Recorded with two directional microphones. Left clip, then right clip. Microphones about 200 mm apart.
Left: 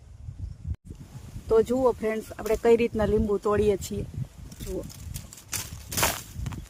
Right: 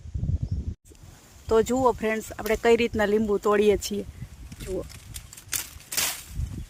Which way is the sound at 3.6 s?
30° right (ahead or behind).